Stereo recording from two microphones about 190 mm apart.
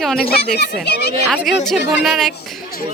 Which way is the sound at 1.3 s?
Centre (ahead or behind).